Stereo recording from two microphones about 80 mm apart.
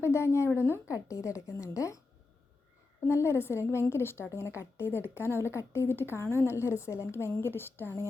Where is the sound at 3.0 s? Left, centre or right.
Left.